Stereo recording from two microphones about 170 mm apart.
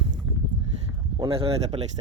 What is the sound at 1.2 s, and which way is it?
Speech, 35° right (ahead or behind).